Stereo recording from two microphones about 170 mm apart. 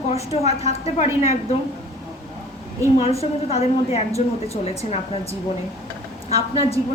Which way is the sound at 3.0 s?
35° left (ahead or behind).